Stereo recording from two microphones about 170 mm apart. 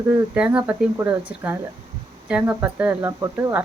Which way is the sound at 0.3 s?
5° right (ahead or behind).